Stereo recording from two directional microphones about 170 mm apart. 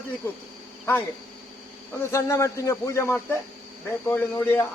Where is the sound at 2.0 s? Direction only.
15° left (ahead or behind).